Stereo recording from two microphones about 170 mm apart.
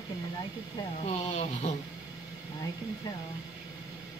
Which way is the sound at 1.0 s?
40° left (ahead or behind).